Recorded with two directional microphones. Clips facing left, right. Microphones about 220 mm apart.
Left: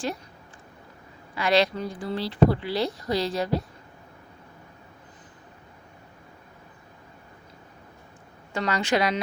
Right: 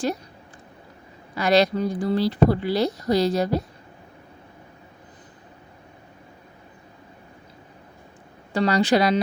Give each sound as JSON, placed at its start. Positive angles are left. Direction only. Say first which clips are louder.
{"t": 1.4, "sound": "speech", "louder": "right 4 dB", "side_deg": -40}
{"t": 8.5, "sound": "speech", "louder": "right 6 dB", "side_deg": -35}